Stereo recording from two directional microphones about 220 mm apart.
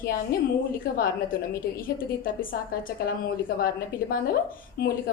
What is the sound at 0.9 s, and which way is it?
A woman's voice, 40° left (ahead or behind).